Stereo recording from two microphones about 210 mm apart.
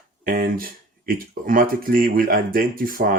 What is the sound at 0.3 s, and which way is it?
Speech, 45° right (ahead or behind).